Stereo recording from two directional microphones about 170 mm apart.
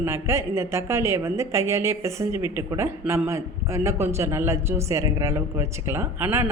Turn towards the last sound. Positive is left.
turn(degrees=-15)  # may be behind; listen again after turning